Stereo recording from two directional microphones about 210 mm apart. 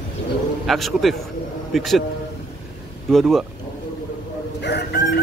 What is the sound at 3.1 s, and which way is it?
Speech, centre (ahead or behind).